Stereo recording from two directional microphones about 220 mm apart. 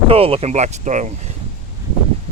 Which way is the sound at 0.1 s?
25° right (ahead or behind).